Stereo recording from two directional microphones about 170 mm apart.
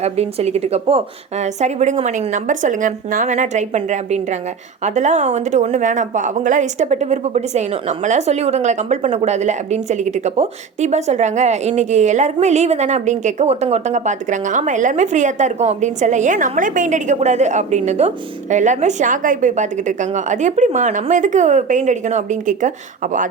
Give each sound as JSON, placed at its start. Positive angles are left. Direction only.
{"t": 0.0, "sound": "speech", "side_deg": -40}